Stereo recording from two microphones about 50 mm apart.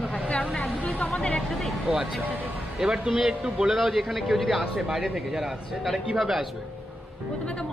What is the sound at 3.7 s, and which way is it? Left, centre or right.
A man's voice, centre.